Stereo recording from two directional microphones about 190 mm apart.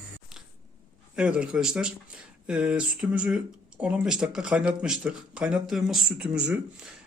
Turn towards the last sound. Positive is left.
turn(degrees=-5)  # may be behind; listen again after turning